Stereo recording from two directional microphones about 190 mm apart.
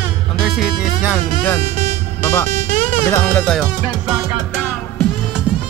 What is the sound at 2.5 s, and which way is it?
Music, 40° right (ahead or behind).